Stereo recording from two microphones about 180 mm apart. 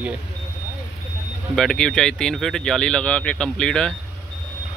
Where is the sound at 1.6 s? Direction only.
5° left (ahead or behind).